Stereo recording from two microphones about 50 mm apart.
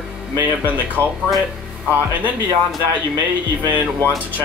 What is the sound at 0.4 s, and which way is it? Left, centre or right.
Speech, right.